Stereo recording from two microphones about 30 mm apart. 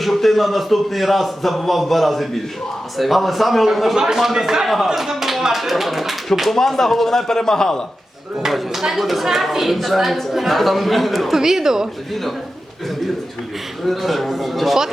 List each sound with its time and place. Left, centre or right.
0.0 s a man's voice: centre
3.9 s speech: right
4.2 s speech: centre
6.5 s speech: centre
8.4 s speech: centre
9.7 s a man's voice: centre
11.3 s speech: centre
13.8 s a man's voice: centre